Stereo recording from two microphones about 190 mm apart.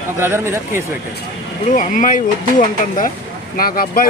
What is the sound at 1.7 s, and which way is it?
Speech, 40° left (ahead or behind).